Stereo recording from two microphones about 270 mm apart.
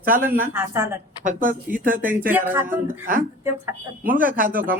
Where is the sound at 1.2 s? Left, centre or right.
Right.